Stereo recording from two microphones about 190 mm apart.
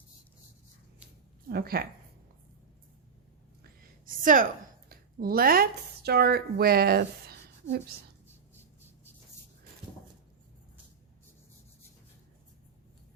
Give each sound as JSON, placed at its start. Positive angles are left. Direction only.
{"t": 1.5, "sound": "speech", "side_deg": -55}
{"t": 3.6, "sound": "a sound", "side_deg": -45}
{"t": 4.9, "sound": "speech", "side_deg": -50}